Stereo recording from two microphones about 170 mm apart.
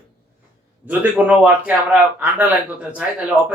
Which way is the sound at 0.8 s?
10° right (ahead or behind).